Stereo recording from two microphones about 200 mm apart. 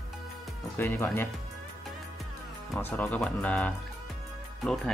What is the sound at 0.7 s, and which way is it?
Speech, 10° left (ahead or behind).